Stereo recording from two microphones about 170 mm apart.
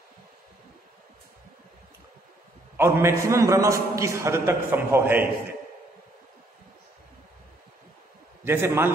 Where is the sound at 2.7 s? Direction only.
15° right (ahead or behind).